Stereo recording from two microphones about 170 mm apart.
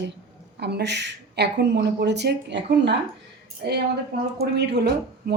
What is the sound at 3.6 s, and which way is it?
Speech, 65° right (ahead or behind).